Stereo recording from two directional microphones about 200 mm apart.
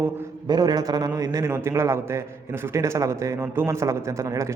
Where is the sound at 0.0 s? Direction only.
20° right (ahead or behind).